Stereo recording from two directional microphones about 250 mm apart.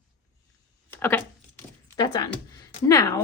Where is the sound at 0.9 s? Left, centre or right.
Centre.